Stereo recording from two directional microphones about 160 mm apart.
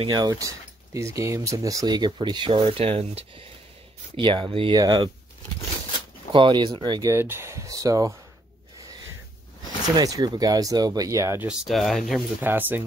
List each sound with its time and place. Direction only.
0.0 s speech: 25° right (ahead or behind)
6.3 s speech: 30° right (ahead or behind)
9.9 s speech: 25° right (ahead or behind)
11.4 s speech: centre (ahead or behind)
12.4 s speech: 10° right (ahead or behind)